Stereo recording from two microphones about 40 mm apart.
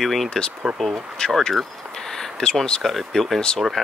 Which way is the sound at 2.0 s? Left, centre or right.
Centre.